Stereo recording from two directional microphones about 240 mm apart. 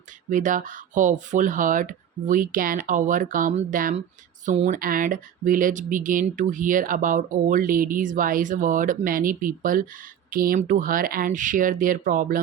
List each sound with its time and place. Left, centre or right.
0.3 s speech: right